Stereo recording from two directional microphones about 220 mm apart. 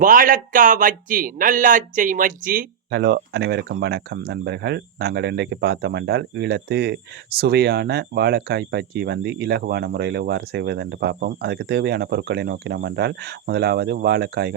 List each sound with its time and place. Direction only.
0.0 s speech: 40° right (ahead or behind)